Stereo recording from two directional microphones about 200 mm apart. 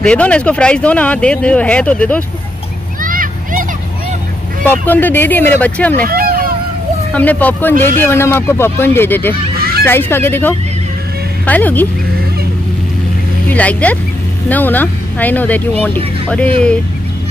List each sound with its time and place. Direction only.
0.0 s speech: 5° left (ahead or behind)
3.0 s a sound: 45° right (ahead or behind)
4.6 s speech: 10° left (ahead or behind)
6.0 s vehicle: 45° right (ahead or behind)
7.2 s speech: 10° left (ahead or behind)
9.6 s honk: 50° right (ahead or behind)
9.8 s speech: 10° left (ahead or behind)
13.5 s speech: 5° left (ahead or behind)